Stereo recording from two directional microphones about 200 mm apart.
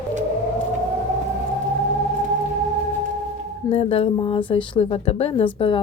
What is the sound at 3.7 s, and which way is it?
A woman's voice, 30° left (ahead or behind).